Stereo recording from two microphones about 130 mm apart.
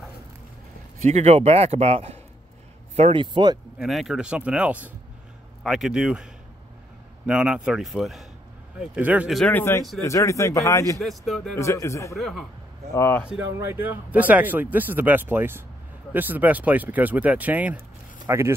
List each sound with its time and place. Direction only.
1.0 s a man's voice: 60° right (ahead or behind)
3.0 s speech: 40° right (ahead or behind)
3.7 s speech: centre (ahead or behind)
7.2 s speech: 5° right (ahead or behind)
9.5 s a man's voice: 15° left (ahead or behind)
11.0 s speech: centre (ahead or behind)
11.5 s a man's voice: 20° left (ahead or behind)
12.2 s speech: centre (ahead or behind)
12.9 s speech: 15° left (ahead or behind)
13.6 s speech: 15° right (ahead or behind)